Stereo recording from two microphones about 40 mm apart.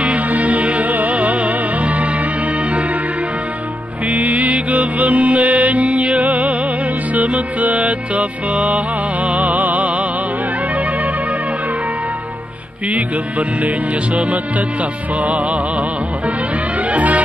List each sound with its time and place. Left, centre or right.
0.0 s music: right
4.1 s music: right
12.9 s music: right
16.9 s music: right